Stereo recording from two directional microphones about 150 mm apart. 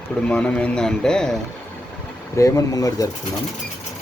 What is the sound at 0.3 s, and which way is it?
A man's voice, 10° left (ahead or behind).